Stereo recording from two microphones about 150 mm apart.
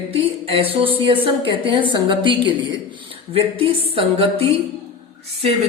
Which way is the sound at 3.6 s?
40° right (ahead or behind).